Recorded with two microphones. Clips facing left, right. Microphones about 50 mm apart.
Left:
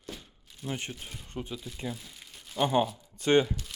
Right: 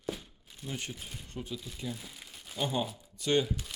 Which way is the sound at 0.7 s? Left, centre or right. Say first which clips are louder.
Left 3 dB; left.